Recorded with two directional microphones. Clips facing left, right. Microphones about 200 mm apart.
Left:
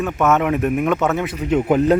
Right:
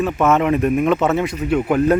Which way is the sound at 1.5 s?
20° left (ahead or behind).